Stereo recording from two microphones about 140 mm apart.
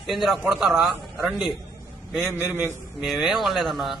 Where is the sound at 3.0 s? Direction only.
Centre (ahead or behind).